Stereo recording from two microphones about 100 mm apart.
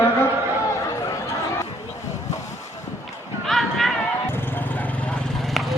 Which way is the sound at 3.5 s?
Centre (ahead or behind).